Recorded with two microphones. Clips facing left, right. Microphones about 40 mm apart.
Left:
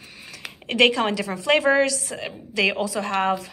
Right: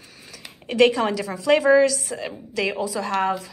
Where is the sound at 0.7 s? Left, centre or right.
Left.